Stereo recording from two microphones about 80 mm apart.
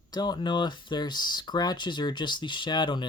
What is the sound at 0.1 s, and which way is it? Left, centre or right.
Speech, left.